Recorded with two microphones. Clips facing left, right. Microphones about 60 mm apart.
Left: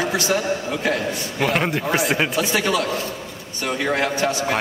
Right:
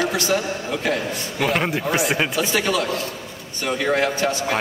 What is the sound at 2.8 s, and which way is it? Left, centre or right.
Speech, left.